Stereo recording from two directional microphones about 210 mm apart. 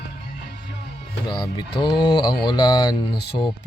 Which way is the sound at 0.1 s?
50° left (ahead or behind).